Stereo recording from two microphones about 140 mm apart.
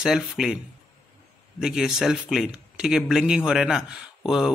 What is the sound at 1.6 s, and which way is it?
Speech, 5° right (ahead or behind).